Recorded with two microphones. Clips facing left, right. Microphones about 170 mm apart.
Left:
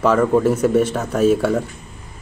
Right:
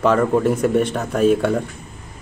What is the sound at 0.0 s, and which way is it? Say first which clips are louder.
Speech: left 1 dB; 5° left (ahead or behind).